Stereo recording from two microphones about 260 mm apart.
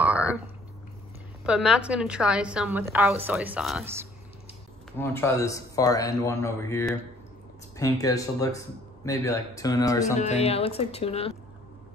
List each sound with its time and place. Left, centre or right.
0.0 s a sound: centre
1.4 s a woman's voice: centre
4.9 s speech: centre
10.1 s speech: left